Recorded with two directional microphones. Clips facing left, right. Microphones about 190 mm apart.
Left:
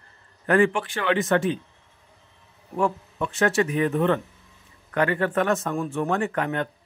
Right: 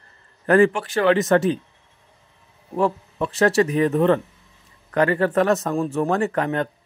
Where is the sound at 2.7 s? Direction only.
35° right (ahead or behind).